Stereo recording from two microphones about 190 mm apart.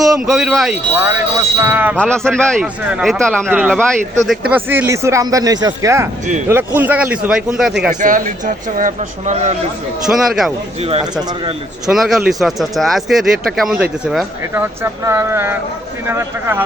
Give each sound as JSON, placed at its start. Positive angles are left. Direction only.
{"t": 0.3, "sound": "speech", "side_deg": 0}
{"t": 2.0, "sound": "speech", "side_deg": 5}
{"t": 3.5, "sound": "speech", "side_deg": -10}
{"t": 8.0, "sound": "a man's voice", "side_deg": -45}
{"t": 10.1, "sound": "speech", "side_deg": 0}
{"t": 11.9, "sound": "speech", "side_deg": 0}